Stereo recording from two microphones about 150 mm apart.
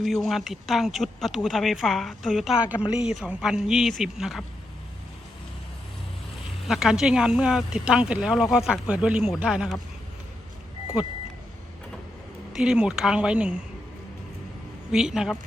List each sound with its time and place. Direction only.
0.0 s speech: centre (ahead or behind)
6.7 s speech: 5° right (ahead or behind)
12.5 s speech: 5° right (ahead or behind)
14.9 s speech: 5° right (ahead or behind)